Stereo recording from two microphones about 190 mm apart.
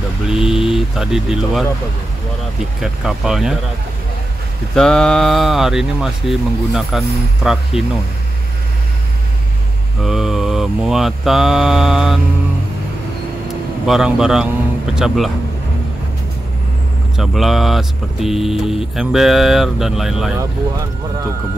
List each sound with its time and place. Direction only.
0.3 s speech: 5° right (ahead or behind)
2.8 s speech: 5° right (ahead or behind)
4.7 s speech: 5° left (ahead or behind)
10.0 s speech: centre (ahead or behind)
13.8 s speech: 5° right (ahead or behind)
17.2 s speech: centre (ahead or behind)
20.3 s speech: 15° right (ahead or behind)